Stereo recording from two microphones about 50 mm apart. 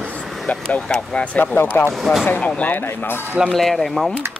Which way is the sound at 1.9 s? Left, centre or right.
Centre.